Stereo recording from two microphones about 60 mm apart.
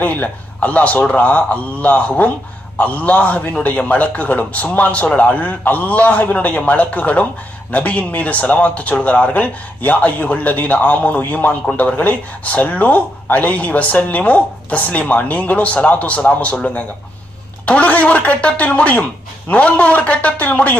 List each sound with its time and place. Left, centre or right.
0.0 s speech: left
17.7 s speech: left